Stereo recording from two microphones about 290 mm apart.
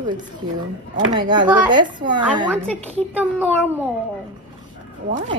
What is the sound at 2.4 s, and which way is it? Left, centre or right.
Speech, centre.